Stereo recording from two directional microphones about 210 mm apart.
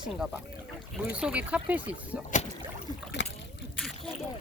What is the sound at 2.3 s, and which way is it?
Rowboat, 35° left (ahead or behind).